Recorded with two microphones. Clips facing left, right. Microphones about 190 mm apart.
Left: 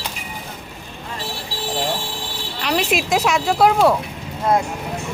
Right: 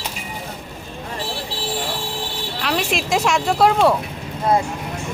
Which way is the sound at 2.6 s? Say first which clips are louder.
Left 2 dB; centre (ahead or behind).